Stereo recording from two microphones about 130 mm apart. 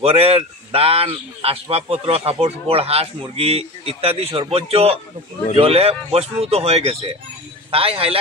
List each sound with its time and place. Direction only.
0.0 s speech: 50° right (ahead or behind)